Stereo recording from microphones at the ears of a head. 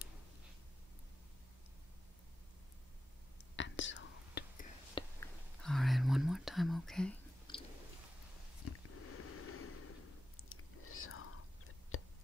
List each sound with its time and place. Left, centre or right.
3.5 s whispering: left
5.7 s whispering: centre
8.6 s snort: left